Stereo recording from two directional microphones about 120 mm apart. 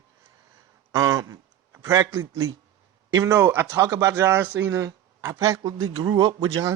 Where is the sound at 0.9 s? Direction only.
30° right (ahead or behind).